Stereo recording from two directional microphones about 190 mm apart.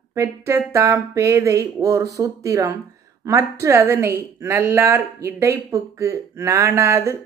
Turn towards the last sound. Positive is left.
turn(degrees=-15)  # may be behind; listen again after turning